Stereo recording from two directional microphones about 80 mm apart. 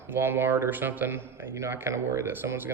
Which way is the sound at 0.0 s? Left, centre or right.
Right.